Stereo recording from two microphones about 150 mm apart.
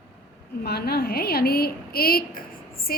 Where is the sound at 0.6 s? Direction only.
90° left.